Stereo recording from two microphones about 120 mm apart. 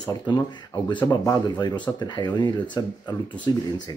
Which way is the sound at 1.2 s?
35° left (ahead or behind).